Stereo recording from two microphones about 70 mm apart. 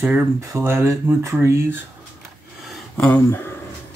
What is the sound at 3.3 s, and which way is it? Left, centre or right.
Speech, left.